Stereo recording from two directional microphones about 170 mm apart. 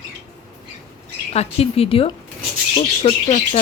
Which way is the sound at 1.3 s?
35° left (ahead or behind).